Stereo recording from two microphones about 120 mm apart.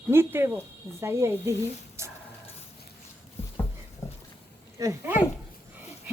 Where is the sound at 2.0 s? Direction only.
25° right (ahead or behind).